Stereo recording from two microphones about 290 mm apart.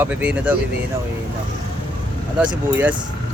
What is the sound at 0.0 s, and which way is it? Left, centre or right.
Speech, centre.